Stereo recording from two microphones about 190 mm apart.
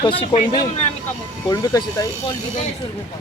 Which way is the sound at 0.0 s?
25° left (ahead or behind).